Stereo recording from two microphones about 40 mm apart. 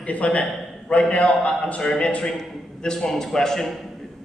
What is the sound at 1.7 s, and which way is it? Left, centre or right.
Speech, left.